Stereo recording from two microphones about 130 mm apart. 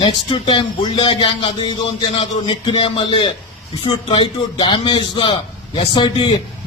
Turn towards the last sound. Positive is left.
turn(degrees=40)  # may be behind; listen again after turning